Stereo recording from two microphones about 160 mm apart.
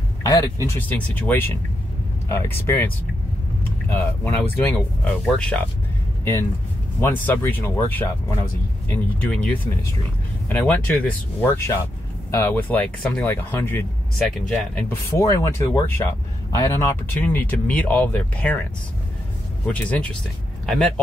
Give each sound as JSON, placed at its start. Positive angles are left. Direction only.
{"t": 0.2, "sound": "speech", "side_deg": 20}
{"t": 3.9, "sound": "speech", "side_deg": 10}
{"t": 7.0, "sound": "speech", "side_deg": 15}
{"t": 10.5, "sound": "speech", "side_deg": 10}
{"t": 19.7, "sound": "speech", "side_deg": 5}